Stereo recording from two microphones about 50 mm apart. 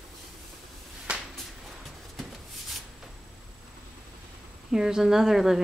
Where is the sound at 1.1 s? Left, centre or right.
Right.